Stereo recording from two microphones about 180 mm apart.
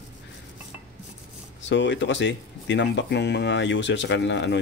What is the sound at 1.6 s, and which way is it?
Speech, 90° left.